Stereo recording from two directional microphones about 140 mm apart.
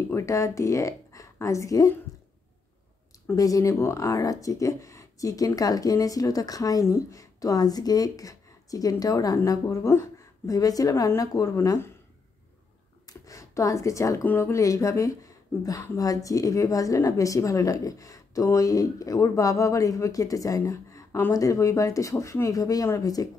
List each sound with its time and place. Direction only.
0.1 s speech: 20° left (ahead or behind)
3.3 s speech: 25° left (ahead or behind)
13.2 s speech: 25° left (ahead or behind)